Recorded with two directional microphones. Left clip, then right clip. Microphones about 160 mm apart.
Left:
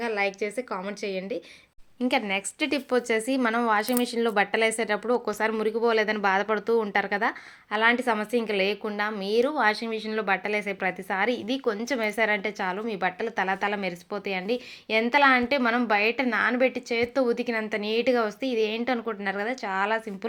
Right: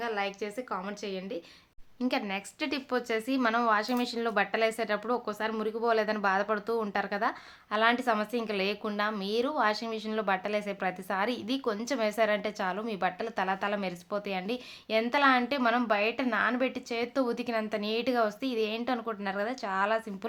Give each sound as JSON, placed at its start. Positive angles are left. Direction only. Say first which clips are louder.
{"t": 0.0, "sound": "speech", "louder": "left 5 dB", "side_deg": 30}
{"t": 5.2, "sound": "speech", "louder": "left 6 dB", "side_deg": 35}
{"t": 5.5, "sound": "speech", "louder": "left 4 dB", "side_deg": 20}